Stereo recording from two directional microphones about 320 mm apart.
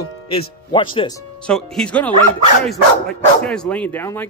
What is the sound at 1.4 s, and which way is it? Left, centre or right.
Speech, centre.